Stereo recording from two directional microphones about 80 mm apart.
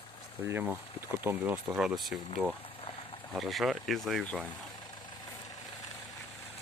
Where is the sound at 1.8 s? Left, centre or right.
Centre.